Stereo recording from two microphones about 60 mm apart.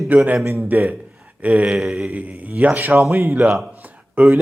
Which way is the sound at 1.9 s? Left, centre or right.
Right.